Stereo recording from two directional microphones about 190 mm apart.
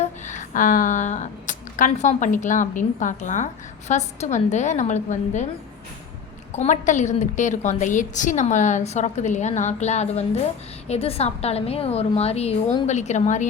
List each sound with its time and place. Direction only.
0.0 s speech: 40° left (ahead or behind)
6.5 s speech: 40° left (ahead or behind)